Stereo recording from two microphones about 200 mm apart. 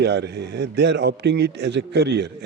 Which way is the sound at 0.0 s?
55° right (ahead or behind).